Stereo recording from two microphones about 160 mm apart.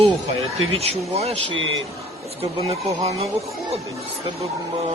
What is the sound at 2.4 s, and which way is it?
Speech, 40° right (ahead or behind).